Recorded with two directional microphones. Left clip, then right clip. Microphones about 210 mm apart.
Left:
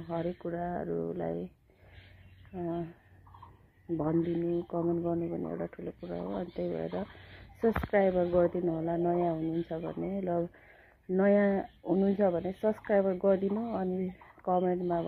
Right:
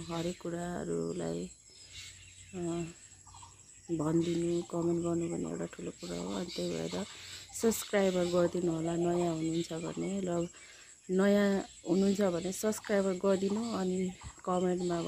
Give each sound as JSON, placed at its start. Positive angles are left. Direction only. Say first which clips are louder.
{"t": 0.1, "sound": "speech", "louder": "left 3 dB", "side_deg": -45}
{"t": 2.5, "sound": "speech", "louder": "left 2 dB", "side_deg": -40}
{"t": 3.9, "sound": "speech", "louder": "left 1 dB", "side_deg": -35}
{"t": 7.6, "sound": "speech", "louder": "left 3 dB", "side_deg": -50}